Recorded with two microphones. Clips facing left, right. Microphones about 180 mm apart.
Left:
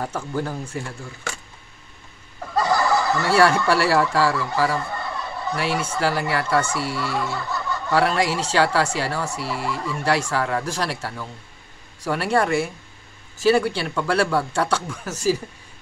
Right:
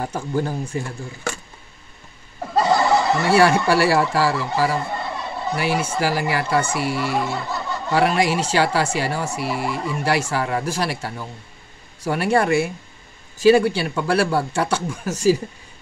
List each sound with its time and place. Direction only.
0.0 s speech: 20° right (ahead or behind)
2.4 s speech: 25° right (ahead or behind)
4.3 s speech: 25° right (ahead or behind)
4.6 s speech: 15° right (ahead or behind)
4.8 s a sound: 25° right (ahead or behind)
5.6 s speech: 25° right (ahead or behind)
5.9 s speech: 15° right (ahead or behind)